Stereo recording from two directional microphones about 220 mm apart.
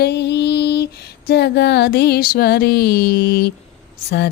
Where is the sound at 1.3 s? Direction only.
50° left (ahead or behind).